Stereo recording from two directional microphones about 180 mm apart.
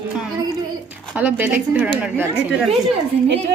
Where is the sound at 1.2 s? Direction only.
10° right (ahead or behind).